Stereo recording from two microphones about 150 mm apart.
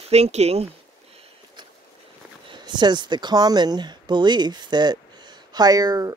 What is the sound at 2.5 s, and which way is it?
Speech, 30° right (ahead or behind).